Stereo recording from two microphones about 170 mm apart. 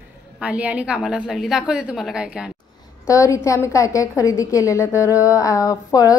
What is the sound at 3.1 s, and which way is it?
A woman's voice, 20° left (ahead or behind).